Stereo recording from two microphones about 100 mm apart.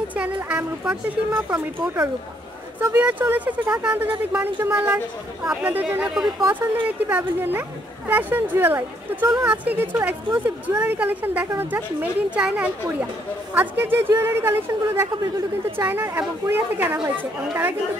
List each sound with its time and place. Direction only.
0.1 s speech: 15° right (ahead or behind)
13.6 s speech: 20° right (ahead or behind)